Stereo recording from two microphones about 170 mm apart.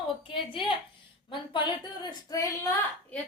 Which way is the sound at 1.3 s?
30° left (ahead or behind).